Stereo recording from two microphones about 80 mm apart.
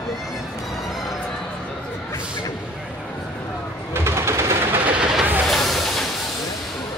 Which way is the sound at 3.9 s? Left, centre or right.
Right.